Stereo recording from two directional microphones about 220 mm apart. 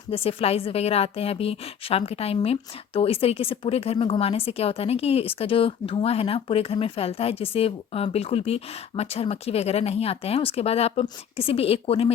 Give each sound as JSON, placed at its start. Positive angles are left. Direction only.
{"t": 0.1, "sound": "a woman's voice", "side_deg": 25}